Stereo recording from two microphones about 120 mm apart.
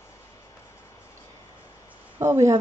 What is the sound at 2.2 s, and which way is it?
Speech, 25° right (ahead or behind).